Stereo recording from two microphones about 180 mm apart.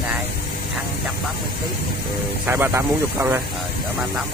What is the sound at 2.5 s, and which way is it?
Speech, 10° right (ahead or behind).